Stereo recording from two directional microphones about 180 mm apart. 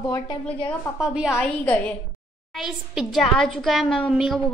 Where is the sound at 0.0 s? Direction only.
20° left (ahead or behind).